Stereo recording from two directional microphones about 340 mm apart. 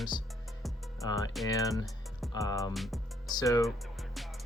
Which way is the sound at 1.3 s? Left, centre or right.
Centre.